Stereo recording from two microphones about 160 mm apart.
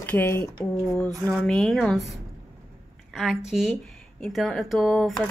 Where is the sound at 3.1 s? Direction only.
Centre (ahead or behind).